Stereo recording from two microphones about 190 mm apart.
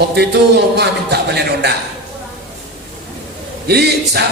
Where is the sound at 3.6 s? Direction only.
60° right (ahead or behind).